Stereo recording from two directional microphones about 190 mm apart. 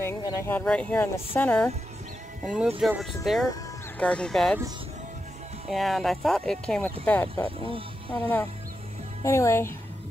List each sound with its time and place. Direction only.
0.0 s speech: 10° left (ahead or behind)
2.4 s speech: 5° right (ahead or behind)
5.7 s speech: centre (ahead or behind)
7.4 s speech: 30° right (ahead or behind)
8.1 s speech: 10° left (ahead or behind)